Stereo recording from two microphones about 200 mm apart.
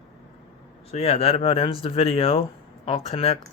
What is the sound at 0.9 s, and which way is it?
Speech, 30° left (ahead or behind).